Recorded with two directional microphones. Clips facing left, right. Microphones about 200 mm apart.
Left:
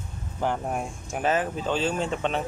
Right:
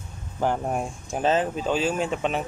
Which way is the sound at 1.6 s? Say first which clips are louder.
Right 2 dB; 10° right (ahead or behind).